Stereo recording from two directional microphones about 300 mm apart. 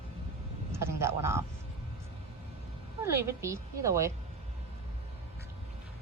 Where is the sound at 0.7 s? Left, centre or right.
Centre.